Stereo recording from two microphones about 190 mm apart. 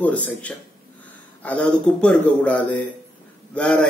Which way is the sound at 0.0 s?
5° left (ahead or behind).